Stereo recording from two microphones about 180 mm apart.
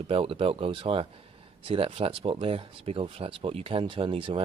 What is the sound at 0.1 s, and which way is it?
Speech, 30° right (ahead or behind).